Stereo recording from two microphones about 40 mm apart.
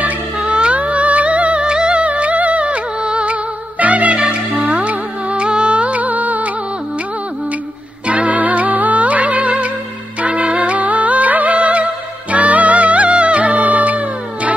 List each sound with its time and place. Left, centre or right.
0.4 s music: right
3.8 s music: right
8.1 s music: right